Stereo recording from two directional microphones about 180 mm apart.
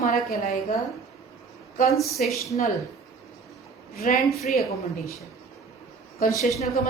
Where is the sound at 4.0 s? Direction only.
55° left (ahead or behind).